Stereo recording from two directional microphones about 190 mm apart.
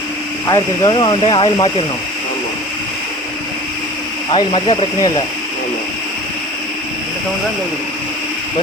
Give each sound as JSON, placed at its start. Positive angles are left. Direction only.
{"t": 0.4, "sound": "speech", "side_deg": 20}
{"t": 4.3, "sound": "speech", "side_deg": 30}